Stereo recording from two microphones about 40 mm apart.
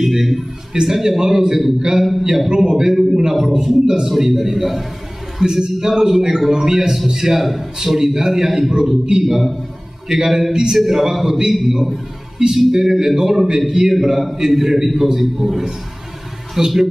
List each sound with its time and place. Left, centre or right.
0.0 s a man's voice: centre
5.4 s a man's voice: centre